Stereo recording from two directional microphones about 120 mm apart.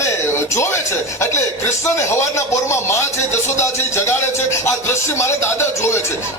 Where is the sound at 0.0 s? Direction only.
25° left (ahead or behind).